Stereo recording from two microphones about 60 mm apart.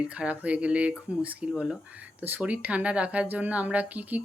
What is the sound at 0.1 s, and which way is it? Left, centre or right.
Speech, right.